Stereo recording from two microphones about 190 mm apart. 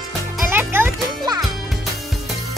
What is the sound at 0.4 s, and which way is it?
Music, 10° right (ahead or behind).